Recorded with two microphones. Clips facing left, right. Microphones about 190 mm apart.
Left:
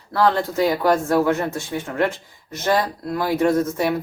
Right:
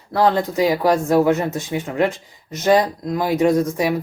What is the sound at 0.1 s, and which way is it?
Speech, 20° right (ahead or behind).